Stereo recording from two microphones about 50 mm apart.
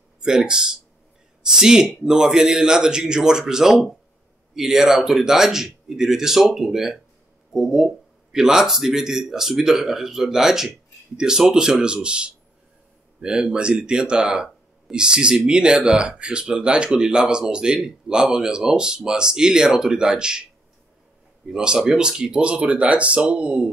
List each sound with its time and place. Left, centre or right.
0.2 s speech: centre
21.5 s speech: centre